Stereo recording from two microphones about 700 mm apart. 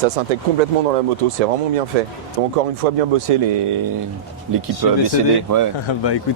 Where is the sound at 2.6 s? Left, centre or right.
Right.